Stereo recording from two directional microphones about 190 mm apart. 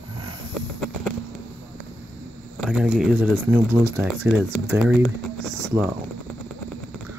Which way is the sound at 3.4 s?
15° right (ahead or behind).